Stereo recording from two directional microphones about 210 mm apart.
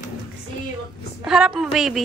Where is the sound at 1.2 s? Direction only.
5° right (ahead or behind).